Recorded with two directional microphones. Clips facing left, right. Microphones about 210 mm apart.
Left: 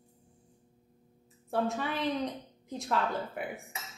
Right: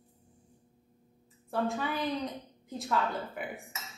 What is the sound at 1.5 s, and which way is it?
A woman's voice, centre (ahead or behind).